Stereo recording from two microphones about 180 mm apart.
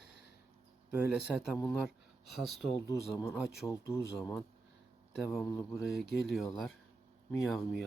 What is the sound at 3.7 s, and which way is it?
Speech, 15° left (ahead or behind).